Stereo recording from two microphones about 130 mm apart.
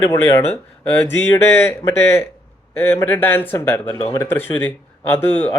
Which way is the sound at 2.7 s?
15° left (ahead or behind).